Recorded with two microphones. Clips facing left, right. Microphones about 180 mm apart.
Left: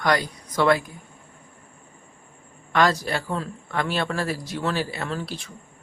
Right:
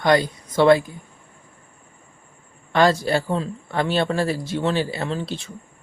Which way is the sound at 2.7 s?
30° right (ahead or behind).